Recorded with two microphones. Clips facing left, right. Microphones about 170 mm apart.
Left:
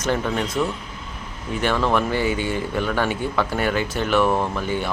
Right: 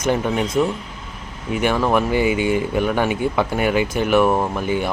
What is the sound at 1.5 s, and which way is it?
Speech, 15° right (ahead or behind).